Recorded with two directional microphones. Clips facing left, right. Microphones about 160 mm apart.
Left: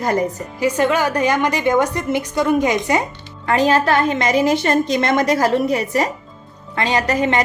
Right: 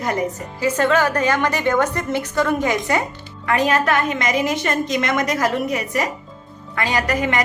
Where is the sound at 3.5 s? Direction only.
30° left (ahead or behind).